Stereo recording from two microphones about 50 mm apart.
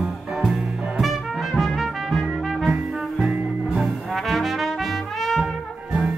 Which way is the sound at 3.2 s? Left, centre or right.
Right.